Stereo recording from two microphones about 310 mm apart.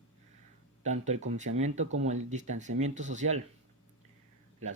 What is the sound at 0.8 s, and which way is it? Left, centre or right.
Speech, right.